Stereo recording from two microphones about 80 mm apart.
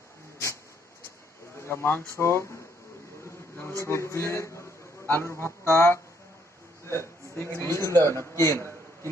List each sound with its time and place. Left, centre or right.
1.6 s speech: left
3.3 s a sound: left
3.8 s a man's voice: left